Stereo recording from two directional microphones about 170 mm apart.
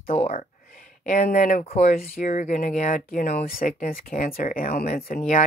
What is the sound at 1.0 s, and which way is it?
Speech, 50° left (ahead or behind).